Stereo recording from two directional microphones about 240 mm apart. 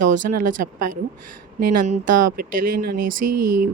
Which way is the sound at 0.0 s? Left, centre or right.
Right.